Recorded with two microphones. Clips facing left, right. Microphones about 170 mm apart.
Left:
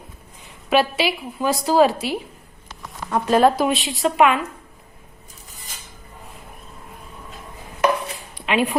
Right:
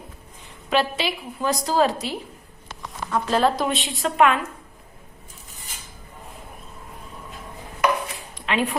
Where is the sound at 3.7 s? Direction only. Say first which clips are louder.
Left 4 dB; centre (ahead or behind).